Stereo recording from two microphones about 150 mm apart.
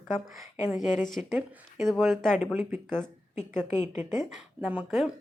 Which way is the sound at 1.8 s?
Centre (ahead or behind).